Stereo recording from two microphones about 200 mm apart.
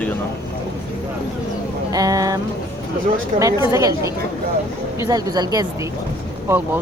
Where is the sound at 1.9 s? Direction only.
15° right (ahead or behind).